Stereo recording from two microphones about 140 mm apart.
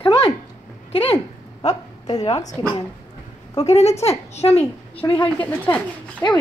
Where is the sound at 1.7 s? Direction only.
25° left (ahead or behind).